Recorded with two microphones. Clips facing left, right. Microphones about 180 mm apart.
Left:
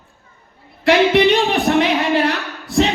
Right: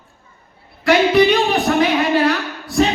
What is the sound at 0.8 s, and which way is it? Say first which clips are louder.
Music: even; 25° left (ahead or behind).